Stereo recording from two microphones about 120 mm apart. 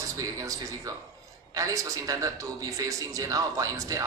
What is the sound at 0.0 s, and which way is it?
A man's voice, 30° right (ahead or behind).